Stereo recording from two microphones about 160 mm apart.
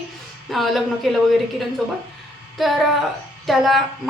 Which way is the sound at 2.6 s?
Centre (ahead or behind).